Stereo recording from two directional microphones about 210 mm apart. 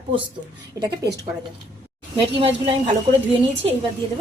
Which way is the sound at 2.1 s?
25° right (ahead or behind).